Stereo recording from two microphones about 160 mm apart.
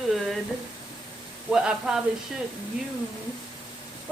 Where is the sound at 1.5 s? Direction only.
5° right (ahead or behind).